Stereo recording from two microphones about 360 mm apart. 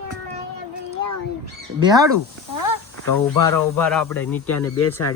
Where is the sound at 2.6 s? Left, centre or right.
Left.